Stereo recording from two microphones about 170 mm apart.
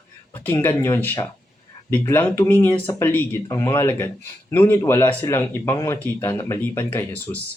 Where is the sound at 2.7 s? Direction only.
30° left (ahead or behind).